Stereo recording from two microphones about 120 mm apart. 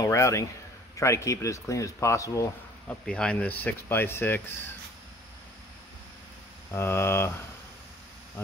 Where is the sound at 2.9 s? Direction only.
10° left (ahead or behind).